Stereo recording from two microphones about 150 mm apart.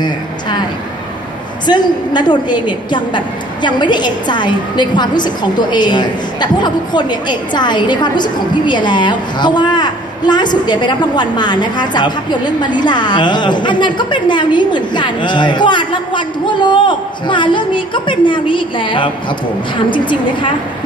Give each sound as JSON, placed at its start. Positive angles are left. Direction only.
{"t": 1.7, "sound": "a woman's voice", "side_deg": 30}